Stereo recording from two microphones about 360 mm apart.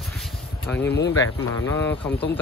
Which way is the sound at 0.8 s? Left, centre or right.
Left.